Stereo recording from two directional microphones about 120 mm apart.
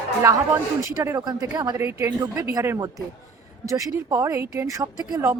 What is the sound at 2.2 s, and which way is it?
Speech, 30° right (ahead or behind).